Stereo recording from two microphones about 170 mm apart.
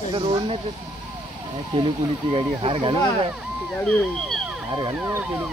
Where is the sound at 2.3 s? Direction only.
30° right (ahead or behind).